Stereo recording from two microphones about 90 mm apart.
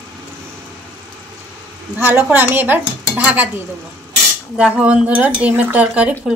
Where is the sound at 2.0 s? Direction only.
25° right (ahead or behind).